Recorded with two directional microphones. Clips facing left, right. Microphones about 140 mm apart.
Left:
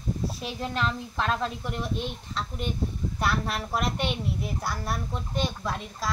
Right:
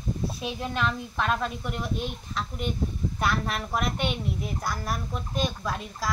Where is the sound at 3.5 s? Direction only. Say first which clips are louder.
Even; 10° left (ahead or behind).